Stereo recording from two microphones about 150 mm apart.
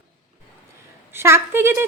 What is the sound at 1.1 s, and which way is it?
Speech, 15° right (ahead or behind).